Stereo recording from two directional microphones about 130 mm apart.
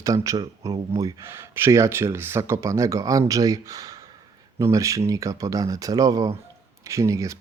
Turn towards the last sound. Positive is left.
turn(degrees=-25)  # may be behind; listen again after turning